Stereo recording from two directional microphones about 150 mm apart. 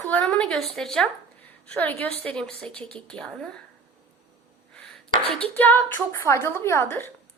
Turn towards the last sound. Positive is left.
turn(degrees=15)  # may be behind; listen again after turning